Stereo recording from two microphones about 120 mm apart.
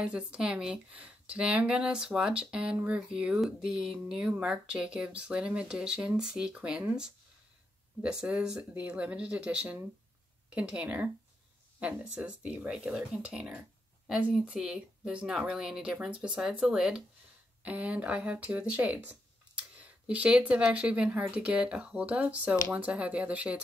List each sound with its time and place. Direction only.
0.0 s speech: 10° right (ahead or behind)